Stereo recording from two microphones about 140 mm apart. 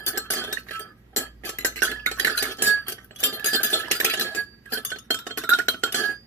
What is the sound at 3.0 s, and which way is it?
Dishes, 15° left (ahead or behind).